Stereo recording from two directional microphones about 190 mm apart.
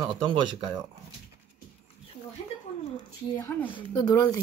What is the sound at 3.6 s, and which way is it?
Speech, 25° left (ahead or behind).